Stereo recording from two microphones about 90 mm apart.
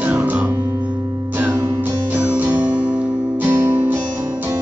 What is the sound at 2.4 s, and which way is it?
Music, 20° right (ahead or behind).